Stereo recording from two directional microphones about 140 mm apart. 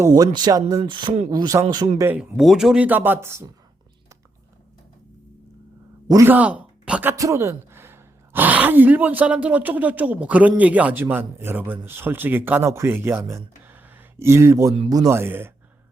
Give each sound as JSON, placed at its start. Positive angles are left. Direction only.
{"t": 0.0, "sound": "speech", "side_deg": -30}
{"t": 2.3, "sound": "speech", "side_deg": 0}
{"t": 6.1, "sound": "speech", "side_deg": -25}
{"t": 6.3, "sound": "speech", "side_deg": -10}